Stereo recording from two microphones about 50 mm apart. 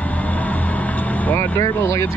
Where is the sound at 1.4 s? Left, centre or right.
Left.